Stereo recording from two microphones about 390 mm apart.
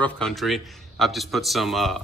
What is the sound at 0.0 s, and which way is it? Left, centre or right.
Speech, centre.